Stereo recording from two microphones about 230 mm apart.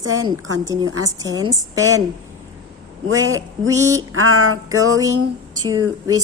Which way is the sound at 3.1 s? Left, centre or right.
Right.